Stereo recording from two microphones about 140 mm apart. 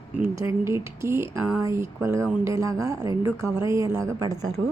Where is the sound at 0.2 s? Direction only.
20° right (ahead or behind).